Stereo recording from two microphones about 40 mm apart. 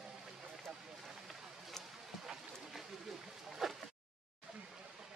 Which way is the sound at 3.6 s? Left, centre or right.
Centre.